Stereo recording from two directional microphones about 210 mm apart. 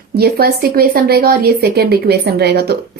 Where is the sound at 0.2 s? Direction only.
45° right (ahead or behind).